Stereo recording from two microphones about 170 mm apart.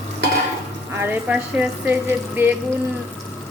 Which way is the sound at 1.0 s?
10° right (ahead or behind).